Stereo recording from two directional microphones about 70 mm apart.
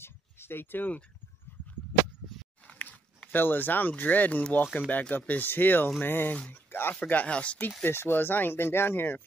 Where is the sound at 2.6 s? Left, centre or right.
Left.